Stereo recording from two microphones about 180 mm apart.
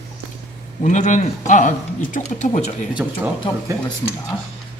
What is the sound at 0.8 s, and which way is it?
Speech, 40° left (ahead or behind).